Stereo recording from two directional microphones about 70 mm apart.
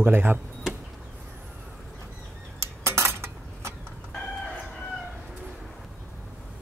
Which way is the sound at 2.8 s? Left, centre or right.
Right.